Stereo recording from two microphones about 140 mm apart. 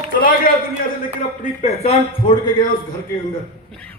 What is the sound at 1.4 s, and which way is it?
Speech, 55° left (ahead or behind).